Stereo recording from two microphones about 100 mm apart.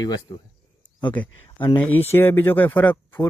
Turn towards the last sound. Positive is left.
turn(degrees=20)  # may be behind; listen again after turning